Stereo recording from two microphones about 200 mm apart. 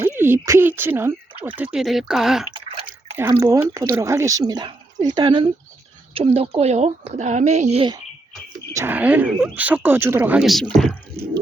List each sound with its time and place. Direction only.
0.2 s speech: 10° right (ahead or behind)
3.4 s speech: 15° right (ahead or behind)
8.7 s speech: 10° right (ahead or behind)